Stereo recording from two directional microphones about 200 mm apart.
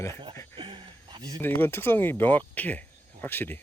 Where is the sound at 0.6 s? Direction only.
25° right (ahead or behind).